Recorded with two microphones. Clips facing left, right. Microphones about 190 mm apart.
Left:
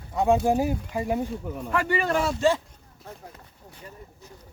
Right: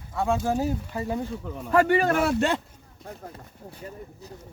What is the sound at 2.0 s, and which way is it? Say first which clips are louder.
Speech: right 1 dB; 55° right (ahead or behind).